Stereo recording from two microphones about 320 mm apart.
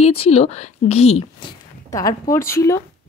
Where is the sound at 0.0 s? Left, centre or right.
Centre.